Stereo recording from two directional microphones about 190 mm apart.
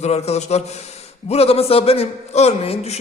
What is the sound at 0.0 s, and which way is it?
A man's voice, 35° left (ahead or behind).